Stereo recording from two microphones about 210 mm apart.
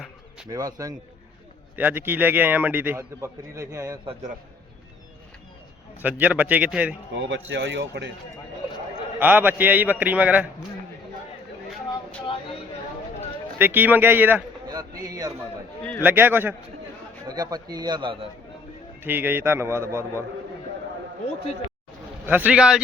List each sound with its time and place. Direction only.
0.4 s a man's voice: 15° right (ahead or behind)
6.0 s a man's voice: 5° right (ahead or behind)
7.2 s a man's voice: 60° right (ahead or behind)
9.1 s a man's voice: 10° right (ahead or behind)
13.6 s a man's voice: 10° right (ahead or behind)
15.8 s a man's voice: 5° left (ahead or behind)
16.0 s a man's voice: 10° right (ahead or behind)
19.0 s a man's voice: 10° right (ahead or behind)
22.3 s speech: 5° right (ahead or behind)